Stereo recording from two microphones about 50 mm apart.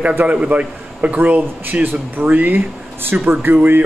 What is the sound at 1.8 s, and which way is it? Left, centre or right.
Speech, right.